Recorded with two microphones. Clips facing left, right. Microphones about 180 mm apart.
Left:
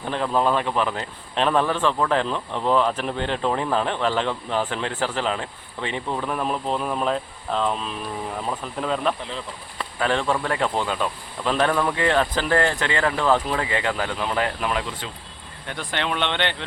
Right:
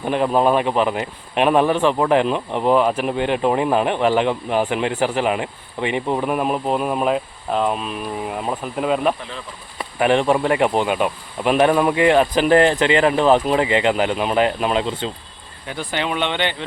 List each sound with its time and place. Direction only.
0.0 s speech: 15° right (ahead or behind)
15.6 s speech: 5° right (ahead or behind)